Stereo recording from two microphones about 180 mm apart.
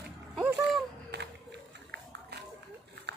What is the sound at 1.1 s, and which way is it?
Run, 75° right (ahead or behind).